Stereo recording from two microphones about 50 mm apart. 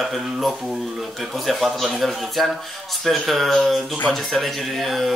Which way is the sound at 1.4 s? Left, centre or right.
Centre.